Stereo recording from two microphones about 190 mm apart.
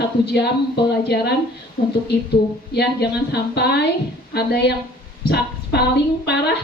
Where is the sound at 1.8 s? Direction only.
45° left (ahead or behind).